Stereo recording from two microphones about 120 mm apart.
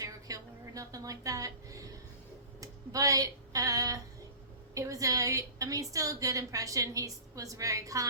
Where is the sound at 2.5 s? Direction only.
30° right (ahead or behind).